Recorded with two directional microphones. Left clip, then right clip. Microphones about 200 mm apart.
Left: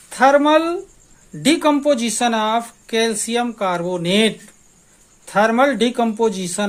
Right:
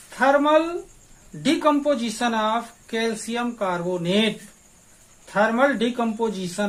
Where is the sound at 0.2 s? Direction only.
45° left (ahead or behind).